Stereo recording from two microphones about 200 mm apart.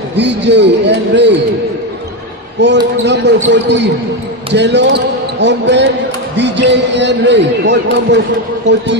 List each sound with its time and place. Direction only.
0.2 s a man's voice: 60° right (ahead or behind)
2.6 s a man's voice: 60° right (ahead or behind)